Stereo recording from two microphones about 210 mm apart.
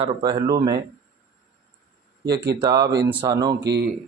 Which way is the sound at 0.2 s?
20° right (ahead or behind).